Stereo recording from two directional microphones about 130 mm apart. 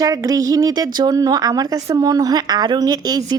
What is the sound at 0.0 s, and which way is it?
A woman's voice, 25° right (ahead or behind).